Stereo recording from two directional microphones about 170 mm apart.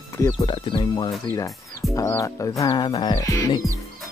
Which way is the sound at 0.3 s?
30° left (ahead or behind).